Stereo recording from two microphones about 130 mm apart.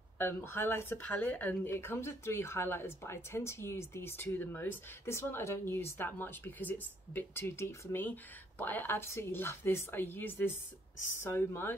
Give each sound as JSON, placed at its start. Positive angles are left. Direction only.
{"t": 0.2, "sound": "speech", "side_deg": 15}